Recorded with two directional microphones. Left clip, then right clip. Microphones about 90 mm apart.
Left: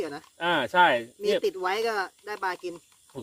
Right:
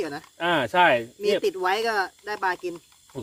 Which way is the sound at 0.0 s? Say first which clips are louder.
Right 3 dB; 15° right (ahead or behind).